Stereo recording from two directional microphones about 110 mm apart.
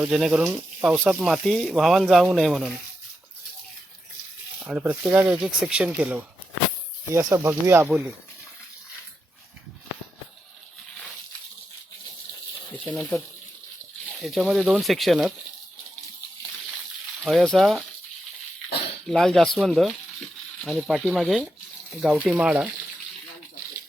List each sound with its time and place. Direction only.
0.0 s speech: 5° right (ahead or behind)
4.6 s speech: 15° right (ahead or behind)
7.1 s speech: 25° right (ahead or behind)
12.7 s water: 10° left (ahead or behind)
14.0 s speech: 5° left (ahead or behind)
17.2 s speech: centre (ahead or behind)
19.0 s speech: 5° left (ahead or behind)